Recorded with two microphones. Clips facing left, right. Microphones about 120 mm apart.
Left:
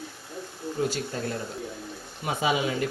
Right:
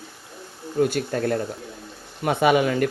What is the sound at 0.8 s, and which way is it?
Speech, 60° right (ahead or behind).